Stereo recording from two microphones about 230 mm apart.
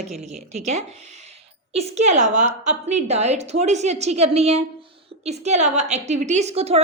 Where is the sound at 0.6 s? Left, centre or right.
Right.